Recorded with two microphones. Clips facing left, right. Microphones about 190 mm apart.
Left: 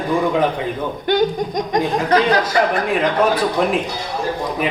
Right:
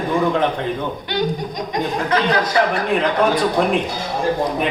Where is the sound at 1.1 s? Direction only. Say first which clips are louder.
Left 7 dB; 50° left (ahead or behind).